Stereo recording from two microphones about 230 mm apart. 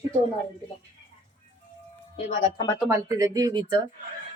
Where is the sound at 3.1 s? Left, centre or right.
Centre.